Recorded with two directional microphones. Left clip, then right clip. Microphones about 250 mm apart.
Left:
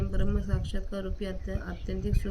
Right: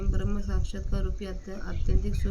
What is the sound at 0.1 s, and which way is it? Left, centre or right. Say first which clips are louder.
Speech: left 1 dB; centre.